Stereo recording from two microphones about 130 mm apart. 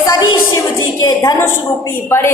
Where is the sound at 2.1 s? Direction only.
20° left (ahead or behind).